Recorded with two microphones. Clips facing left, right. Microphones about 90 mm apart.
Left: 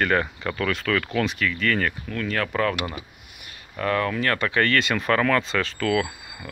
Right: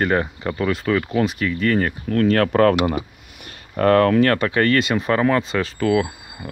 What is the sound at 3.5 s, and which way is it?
Speech, 50° right (ahead or behind).